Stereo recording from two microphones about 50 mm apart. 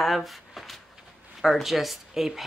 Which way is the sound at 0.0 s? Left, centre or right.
Centre.